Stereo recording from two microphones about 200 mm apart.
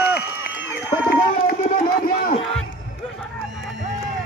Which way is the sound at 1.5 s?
45° left (ahead or behind).